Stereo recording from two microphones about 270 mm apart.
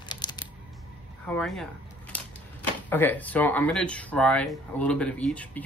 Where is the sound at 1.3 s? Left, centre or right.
Centre.